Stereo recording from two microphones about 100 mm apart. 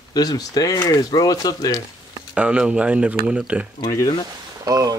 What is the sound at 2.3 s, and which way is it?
Speech, 10° right (ahead or behind).